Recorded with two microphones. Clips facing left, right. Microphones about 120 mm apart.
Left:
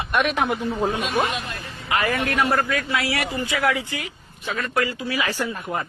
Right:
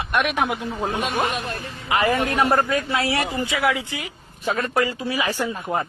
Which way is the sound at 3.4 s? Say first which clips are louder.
Even; 15° right (ahead or behind).